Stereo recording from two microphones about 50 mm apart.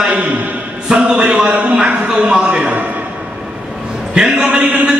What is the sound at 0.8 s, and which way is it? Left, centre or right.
Speech, right.